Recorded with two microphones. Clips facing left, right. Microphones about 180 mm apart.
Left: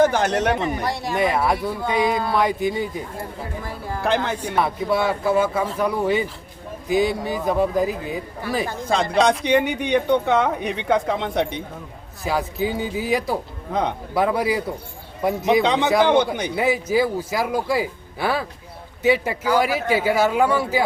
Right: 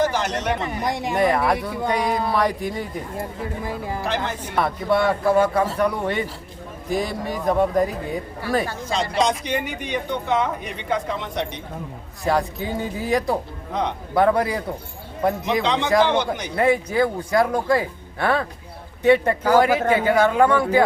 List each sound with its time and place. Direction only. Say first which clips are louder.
0.0 s speech: left 4 dB; 55° left (ahead or behind)
0.9 s speech: right 1 dB; 15° right (ahead or behind)
1.1 s speech: right 1 dB; centre (ahead or behind)
4.5 s speech: right 1 dB; centre (ahead or behind)
8.9 s speech: left 4 dB; 60° left (ahead or behind)
12.2 s speech: right 1 dB; centre (ahead or behind)
16.0 s speech: left 4 dB; 55° left (ahead or behind)
16.6 s speech: right 1 dB; 5° left (ahead or behind)
19.5 s speech: right 3 dB; 45° right (ahead or behind)
20.0 s speech: even; 5° left (ahead or behind)